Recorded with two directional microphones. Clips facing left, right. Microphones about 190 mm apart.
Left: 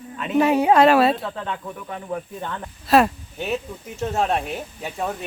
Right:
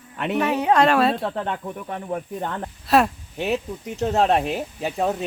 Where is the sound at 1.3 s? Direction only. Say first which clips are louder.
Right 3 dB; 50° right (ahead or behind).